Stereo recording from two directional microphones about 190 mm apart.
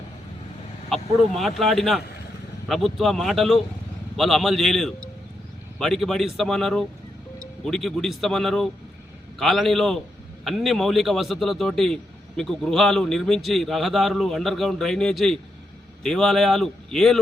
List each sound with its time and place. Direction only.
0.9 s vehicle: centre (ahead or behind)
1.3 s a man's voice: centre (ahead or behind)